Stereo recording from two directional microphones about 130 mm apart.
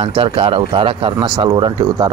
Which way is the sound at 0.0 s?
45° right (ahead or behind).